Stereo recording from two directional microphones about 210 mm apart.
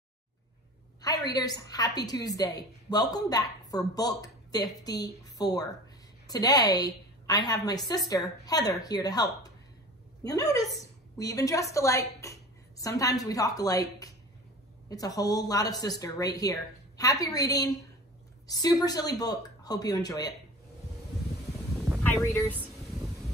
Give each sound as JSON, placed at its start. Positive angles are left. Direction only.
{"t": 1.0, "sound": "a woman's voice", "side_deg": 20}
{"t": 21.7, "sound": "a sound", "side_deg": 0}
{"t": 22.0, "sound": "speech", "side_deg": 10}